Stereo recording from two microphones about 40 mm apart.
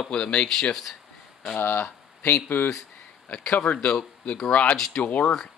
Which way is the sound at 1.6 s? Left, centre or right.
Left.